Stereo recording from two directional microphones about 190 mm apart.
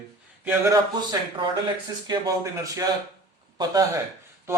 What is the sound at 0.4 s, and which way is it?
Speech, 15° right (ahead or behind).